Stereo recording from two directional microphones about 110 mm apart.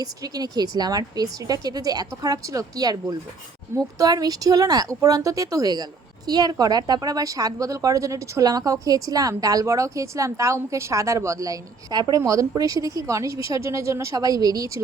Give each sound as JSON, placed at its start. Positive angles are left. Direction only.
{"t": 0.0, "sound": "speech", "side_deg": -35}